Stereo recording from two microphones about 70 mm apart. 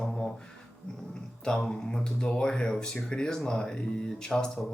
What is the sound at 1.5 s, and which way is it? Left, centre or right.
Speech, centre.